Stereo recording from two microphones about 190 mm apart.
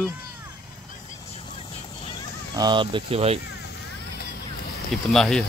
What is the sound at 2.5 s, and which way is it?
Speech, 20° right (ahead or behind).